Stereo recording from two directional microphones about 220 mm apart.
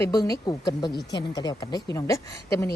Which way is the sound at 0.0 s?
15° left (ahead or behind).